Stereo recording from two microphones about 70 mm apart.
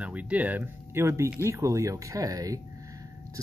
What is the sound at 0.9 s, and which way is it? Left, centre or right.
Speech, right.